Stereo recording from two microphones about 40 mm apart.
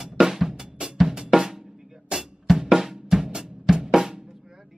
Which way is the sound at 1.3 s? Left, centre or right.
Centre.